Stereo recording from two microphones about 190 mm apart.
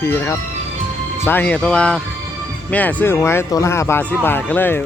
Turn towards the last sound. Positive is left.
turn(degrees=10)  # may be behind; listen again after turning